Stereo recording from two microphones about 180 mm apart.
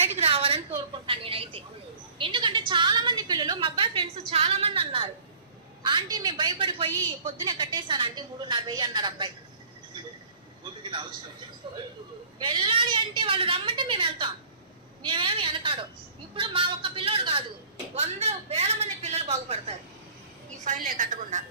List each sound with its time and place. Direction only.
0.1 s a sound: 35° right (ahead or behind)
4.3 s a man's voice: 35° right (ahead or behind)
10.6 s a woman's voice: 25° right (ahead or behind)
20.7 s a woman's voice: 50° right (ahead or behind)